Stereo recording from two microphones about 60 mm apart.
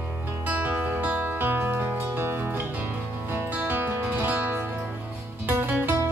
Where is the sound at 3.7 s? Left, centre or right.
Right.